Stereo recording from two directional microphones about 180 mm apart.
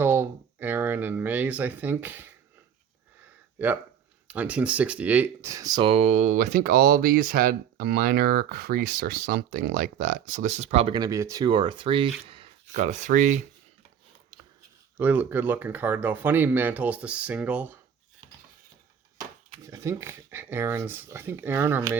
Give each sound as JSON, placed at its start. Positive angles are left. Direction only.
{"t": 0.0, "sound": "speech", "side_deg": -10}
{"t": 3.6, "sound": "speech", "side_deg": -10}
{"t": 11.0, "sound": "speech", "side_deg": -15}
{"t": 12.7, "sound": "speech", "side_deg": -40}
{"t": 14.9, "sound": "speech", "side_deg": -10}
{"t": 19.6, "sound": "speech", "side_deg": -15}